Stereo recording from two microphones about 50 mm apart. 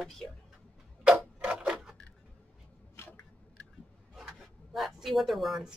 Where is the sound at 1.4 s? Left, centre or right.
Right.